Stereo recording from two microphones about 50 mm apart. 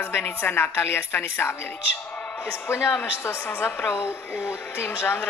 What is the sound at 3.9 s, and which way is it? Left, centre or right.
A man's voice, left.